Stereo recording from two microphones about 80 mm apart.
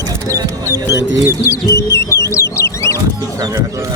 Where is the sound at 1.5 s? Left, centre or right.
Left.